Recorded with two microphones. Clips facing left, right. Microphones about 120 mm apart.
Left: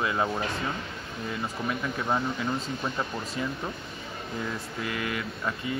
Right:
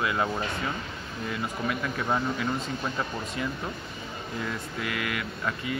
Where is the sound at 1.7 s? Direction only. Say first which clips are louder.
Even; 25° left (ahead or behind).